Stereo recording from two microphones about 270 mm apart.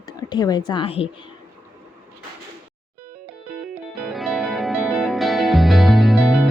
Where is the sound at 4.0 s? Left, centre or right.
Centre.